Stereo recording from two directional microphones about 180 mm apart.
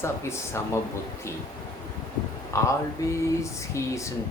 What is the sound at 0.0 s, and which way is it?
Speech, 15° left (ahead or behind).